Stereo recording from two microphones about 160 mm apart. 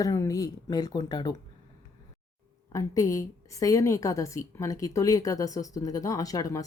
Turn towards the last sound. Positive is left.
turn(degrees=20)  # may be behind; listen again after turning